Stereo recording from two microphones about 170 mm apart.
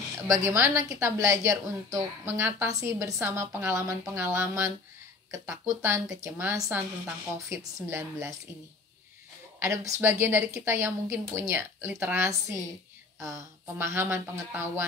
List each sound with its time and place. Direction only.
0.3 s a woman's voice: 15° right (ahead or behind)
9.6 s a woman's voice: 15° right (ahead or behind)